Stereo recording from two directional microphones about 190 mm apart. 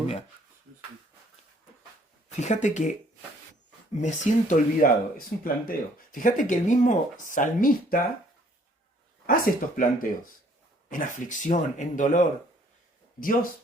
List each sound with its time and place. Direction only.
2.4 s speech: 40° left (ahead or behind)
4.0 s speech: 40° left (ahead or behind)
9.2 s speech: 50° left (ahead or behind)